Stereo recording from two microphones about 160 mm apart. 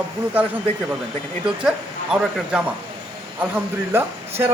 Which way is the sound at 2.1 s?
5° right (ahead or behind).